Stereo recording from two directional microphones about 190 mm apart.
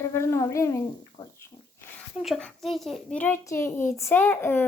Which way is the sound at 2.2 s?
Centre (ahead or behind).